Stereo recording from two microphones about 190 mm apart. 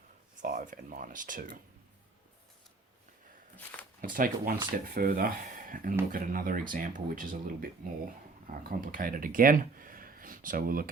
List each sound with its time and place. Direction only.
0.4 s speech: 45° right (ahead or behind)
4.0 s speech: 45° right (ahead or behind)